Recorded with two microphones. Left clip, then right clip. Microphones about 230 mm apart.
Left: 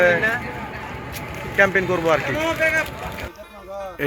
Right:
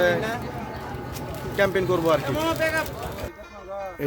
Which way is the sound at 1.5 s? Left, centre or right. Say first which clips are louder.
Left 4 dB; centre.